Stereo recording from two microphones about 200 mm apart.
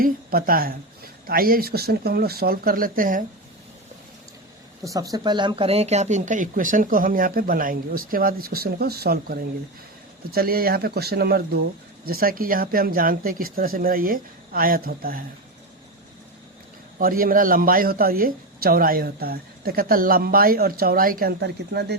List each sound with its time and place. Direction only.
0.0 s a man's voice: 45° right (ahead or behind)
4.8 s a man's voice: 15° right (ahead or behind); by 15.2 s 45° right (ahead or behind)
17.0 s a man's voice: 45° right (ahead or behind)